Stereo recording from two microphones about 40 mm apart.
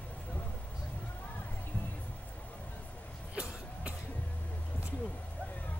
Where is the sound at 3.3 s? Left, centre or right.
Right.